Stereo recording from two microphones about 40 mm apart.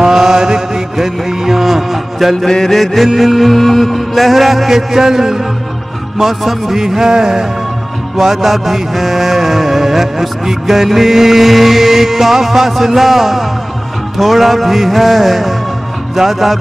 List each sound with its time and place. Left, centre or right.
0.0 s mantra: centre
2.4 s mantra: centre
3.2 s music: centre